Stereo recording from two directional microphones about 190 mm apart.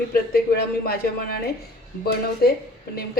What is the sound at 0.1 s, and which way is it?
A woman's voice, 50° left (ahead or behind).